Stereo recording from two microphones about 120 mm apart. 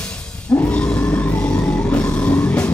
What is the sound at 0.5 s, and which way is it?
Grunt, 15° left (ahead or behind).